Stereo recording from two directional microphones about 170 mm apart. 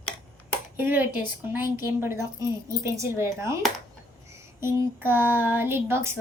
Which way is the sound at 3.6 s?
Centre (ahead or behind).